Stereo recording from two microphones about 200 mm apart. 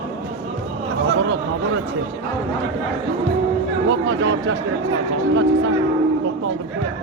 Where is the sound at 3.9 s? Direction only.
65° right (ahead or behind).